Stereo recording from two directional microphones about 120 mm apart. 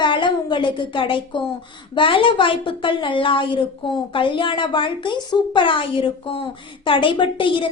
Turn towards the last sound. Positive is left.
turn(degrees=45)  # may be behind; listen again after turning